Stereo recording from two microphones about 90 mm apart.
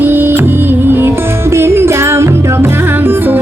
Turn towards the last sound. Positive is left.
turn(degrees=-25)  # may be behind; listen again after turning